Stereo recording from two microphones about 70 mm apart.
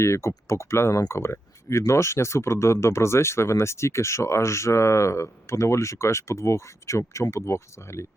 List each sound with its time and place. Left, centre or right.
0.0 s speech: left